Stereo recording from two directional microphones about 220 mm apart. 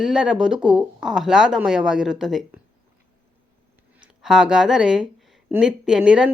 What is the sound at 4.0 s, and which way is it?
Speech, centre (ahead or behind).